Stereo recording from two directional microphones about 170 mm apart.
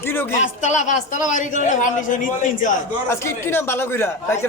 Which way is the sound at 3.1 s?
15° left (ahead or behind).